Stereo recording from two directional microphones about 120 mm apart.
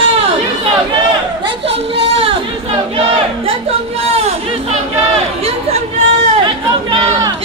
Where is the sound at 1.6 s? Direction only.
50° right (ahead or behind).